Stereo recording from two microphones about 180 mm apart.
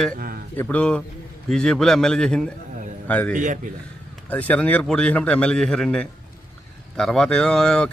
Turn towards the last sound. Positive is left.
turn(degrees=5)  # may be behind; listen again after turning